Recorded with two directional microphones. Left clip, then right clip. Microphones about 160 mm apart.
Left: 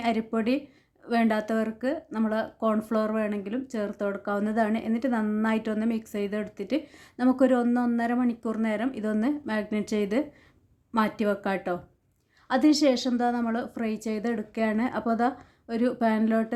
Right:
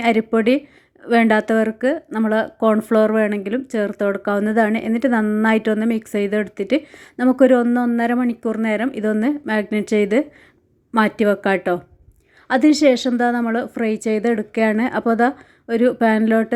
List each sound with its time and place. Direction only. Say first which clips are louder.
0.0 s a woman's voice: right 11 dB; 30° right (ahead or behind)